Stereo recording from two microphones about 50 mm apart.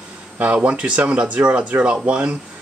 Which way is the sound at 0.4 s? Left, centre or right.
Right.